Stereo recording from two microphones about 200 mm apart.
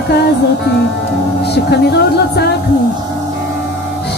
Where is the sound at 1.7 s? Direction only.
55° left (ahead or behind).